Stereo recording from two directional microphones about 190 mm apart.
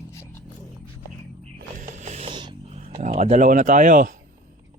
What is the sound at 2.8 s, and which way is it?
Speech, 40° right (ahead or behind).